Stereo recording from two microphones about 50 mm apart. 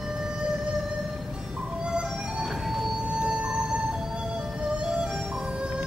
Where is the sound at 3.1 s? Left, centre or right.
Centre.